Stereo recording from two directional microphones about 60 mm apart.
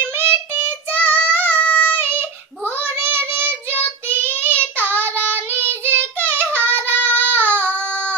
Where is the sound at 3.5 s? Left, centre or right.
Left.